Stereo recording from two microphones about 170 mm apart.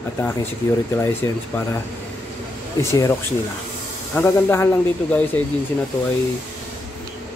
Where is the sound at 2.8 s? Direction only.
15° left (ahead or behind).